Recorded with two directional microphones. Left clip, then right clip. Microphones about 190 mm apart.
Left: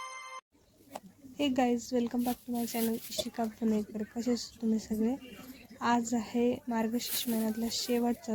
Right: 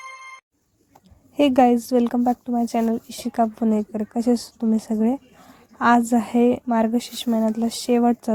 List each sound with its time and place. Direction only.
1.4 s speech: 40° right (ahead or behind)